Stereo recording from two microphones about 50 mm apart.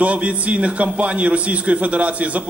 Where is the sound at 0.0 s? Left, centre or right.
Right.